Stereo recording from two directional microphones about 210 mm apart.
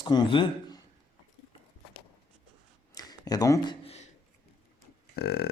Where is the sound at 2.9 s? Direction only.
20° left (ahead or behind).